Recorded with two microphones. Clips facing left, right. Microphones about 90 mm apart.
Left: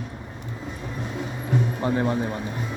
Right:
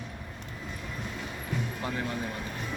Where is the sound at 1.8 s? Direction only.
30° left (ahead or behind).